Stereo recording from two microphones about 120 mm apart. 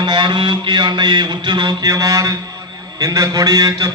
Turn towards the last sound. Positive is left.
turn(degrees=-30)  # may be behind; listen again after turning